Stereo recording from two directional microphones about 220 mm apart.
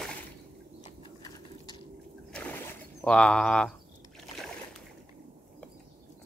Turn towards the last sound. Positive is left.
turn(degrees=0)  # may be behind; listen again after turning